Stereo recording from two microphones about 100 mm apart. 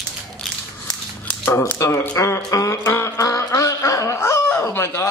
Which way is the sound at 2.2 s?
30° left (ahead or behind).